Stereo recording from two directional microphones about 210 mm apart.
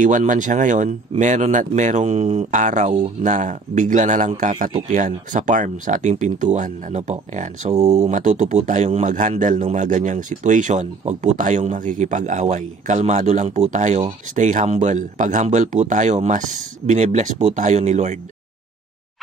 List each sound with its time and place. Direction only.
0.0 s a man's voice: 40° right (ahead or behind)